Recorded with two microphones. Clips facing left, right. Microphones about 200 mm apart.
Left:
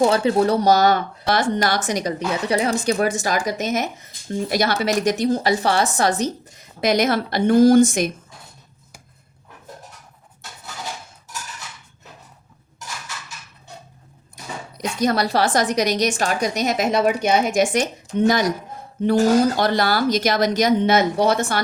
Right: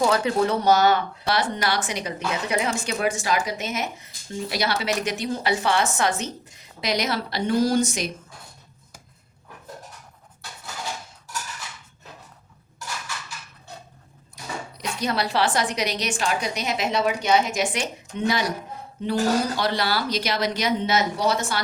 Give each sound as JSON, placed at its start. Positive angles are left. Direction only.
{"t": 0.0, "sound": "speech", "side_deg": 30}
{"t": 14.8, "sound": "speech", "side_deg": 45}
{"t": 19.5, "sound": "speech", "side_deg": 45}